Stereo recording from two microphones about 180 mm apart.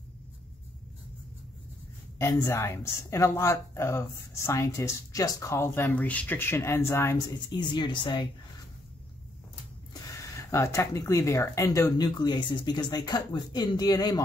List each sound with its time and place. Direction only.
2.1 s a woman's voice: 15° left (ahead or behind)
7.5 s speech: 25° left (ahead or behind)
10.3 s speech: 15° left (ahead or behind)